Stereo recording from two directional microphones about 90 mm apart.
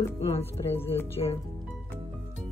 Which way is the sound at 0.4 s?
25° left (ahead or behind).